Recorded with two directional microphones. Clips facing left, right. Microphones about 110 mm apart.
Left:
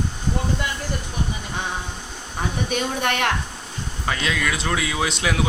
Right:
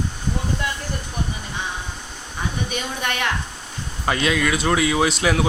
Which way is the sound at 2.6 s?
65° left (ahead or behind).